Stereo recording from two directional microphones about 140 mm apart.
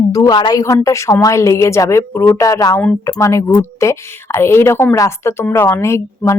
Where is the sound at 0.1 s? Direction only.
30° left (ahead or behind).